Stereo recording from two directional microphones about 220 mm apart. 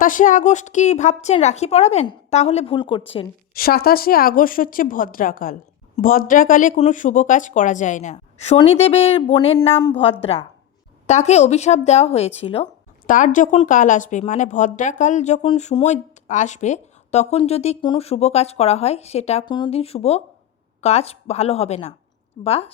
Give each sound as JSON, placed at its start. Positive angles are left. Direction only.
{"t": 0.0, "sound": "a woman's voice", "side_deg": 35}
{"t": 3.5, "sound": "a woman's voice", "side_deg": 45}